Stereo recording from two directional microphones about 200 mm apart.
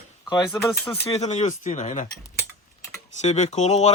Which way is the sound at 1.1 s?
35° left (ahead or behind).